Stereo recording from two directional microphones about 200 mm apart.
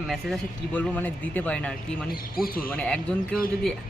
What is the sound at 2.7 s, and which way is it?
Speech, 5° left (ahead or behind).